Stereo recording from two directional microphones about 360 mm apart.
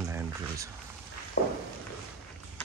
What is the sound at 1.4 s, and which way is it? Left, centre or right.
Walk, left.